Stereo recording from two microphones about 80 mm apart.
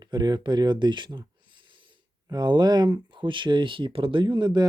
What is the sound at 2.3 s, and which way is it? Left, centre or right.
Speech, right.